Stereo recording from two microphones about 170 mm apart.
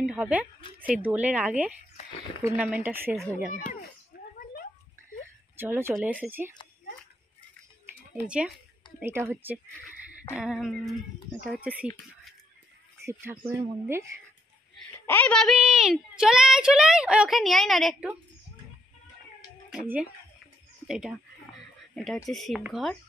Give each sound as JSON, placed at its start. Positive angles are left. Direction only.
{"t": 0.0, "sound": "a woman's voice", "side_deg": -5}
{"t": 4.1, "sound": "a sound", "side_deg": 65}
{"t": 5.6, "sound": "speech", "side_deg": -15}
{"t": 8.3, "sound": "a woman's voice", "side_deg": -5}
{"t": 13.0, "sound": "speech", "side_deg": -15}
{"t": 15.0, "sound": "a woman's voice", "side_deg": 10}
{"t": 19.7, "sound": "a woman's voice", "side_deg": -5}